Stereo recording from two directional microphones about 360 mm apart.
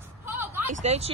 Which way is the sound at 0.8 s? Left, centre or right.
Centre.